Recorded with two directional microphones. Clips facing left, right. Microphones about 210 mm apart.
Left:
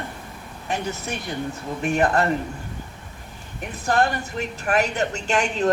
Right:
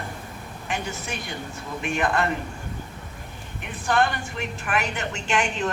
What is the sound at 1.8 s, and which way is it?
Speech, 40° left (ahead or behind).